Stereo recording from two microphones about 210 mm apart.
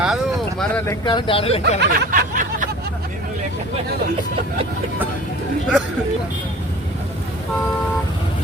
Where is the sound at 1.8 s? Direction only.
40° right (ahead or behind).